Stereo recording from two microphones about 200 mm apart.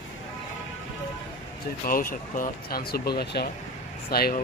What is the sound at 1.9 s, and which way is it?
Speech, 45° left (ahead or behind).